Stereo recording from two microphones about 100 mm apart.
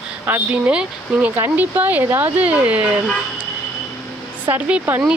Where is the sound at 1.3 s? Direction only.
20° right (ahead or behind).